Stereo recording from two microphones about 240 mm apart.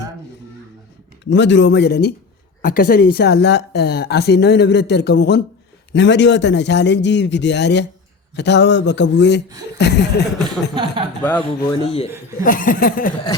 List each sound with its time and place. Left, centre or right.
1.3 s a woman's voice: left
11.2 s speech: centre
11.7 s speech: left
12.4 s a sound: left